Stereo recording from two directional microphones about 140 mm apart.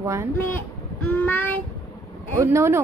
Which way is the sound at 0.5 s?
10° left (ahead or behind).